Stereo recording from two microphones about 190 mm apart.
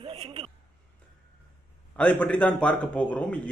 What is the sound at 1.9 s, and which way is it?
A man's voice, 5° left (ahead or behind).